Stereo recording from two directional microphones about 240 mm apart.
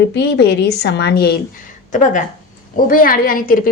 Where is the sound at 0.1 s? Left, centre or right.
Left.